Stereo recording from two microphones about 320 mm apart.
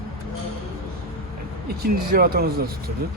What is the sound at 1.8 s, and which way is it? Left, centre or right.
Speech, right.